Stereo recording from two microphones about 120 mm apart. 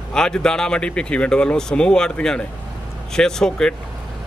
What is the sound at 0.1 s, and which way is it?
A man's voice, 5° left (ahead or behind).